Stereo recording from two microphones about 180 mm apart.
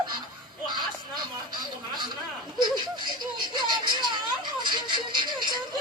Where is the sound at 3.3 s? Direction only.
25° right (ahead or behind).